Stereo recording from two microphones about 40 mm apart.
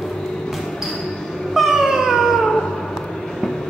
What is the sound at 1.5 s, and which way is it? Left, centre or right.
Cat, centre.